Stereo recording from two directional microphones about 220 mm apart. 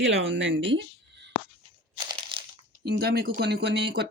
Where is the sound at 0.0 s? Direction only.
55° right (ahead or behind).